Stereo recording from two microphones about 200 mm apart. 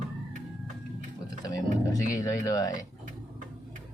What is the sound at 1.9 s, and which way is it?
Speech, 15° left (ahead or behind).